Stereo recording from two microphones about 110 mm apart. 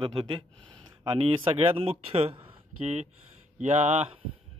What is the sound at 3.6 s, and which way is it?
Speech, 90° right.